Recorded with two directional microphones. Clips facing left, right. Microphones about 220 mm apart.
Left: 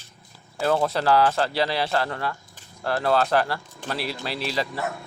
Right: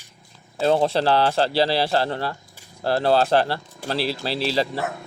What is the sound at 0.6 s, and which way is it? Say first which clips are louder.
Speech: right 3 dB; 25° right (ahead or behind).